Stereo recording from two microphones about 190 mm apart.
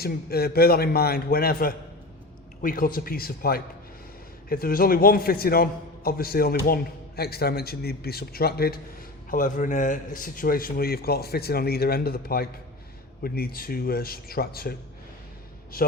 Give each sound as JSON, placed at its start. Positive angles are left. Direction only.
{"t": 0.0, "sound": "a man's voice", "side_deg": 55}